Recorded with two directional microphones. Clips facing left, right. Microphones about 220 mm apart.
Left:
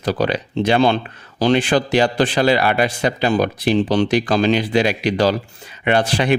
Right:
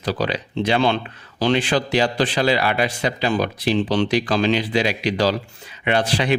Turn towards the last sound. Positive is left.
turn(degrees=50)  # may be behind; listen again after turning